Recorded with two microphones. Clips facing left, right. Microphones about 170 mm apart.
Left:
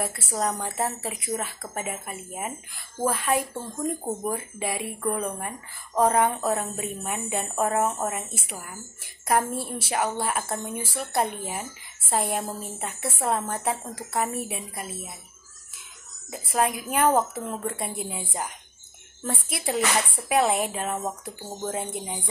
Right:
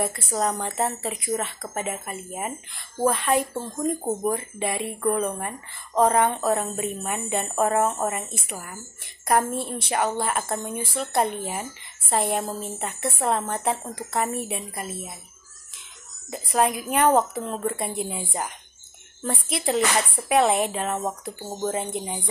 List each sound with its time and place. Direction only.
0.0 s speech: 5° left (ahead or behind)
3.5 s speech: 20° right (ahead or behind)
4.3 s speech: 5° left (ahead or behind)
16.3 s speech: centre (ahead or behind)